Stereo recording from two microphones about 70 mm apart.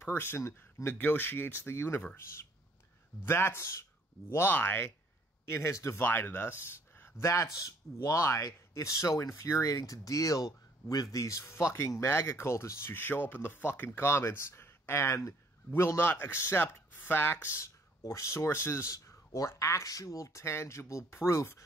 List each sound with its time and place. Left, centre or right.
0.0 s speech: left
3.3 s speech: left
5.9 s speech: left
11.4 s speech: left